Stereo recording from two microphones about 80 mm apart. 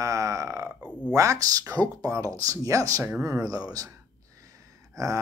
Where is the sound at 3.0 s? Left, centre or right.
Right.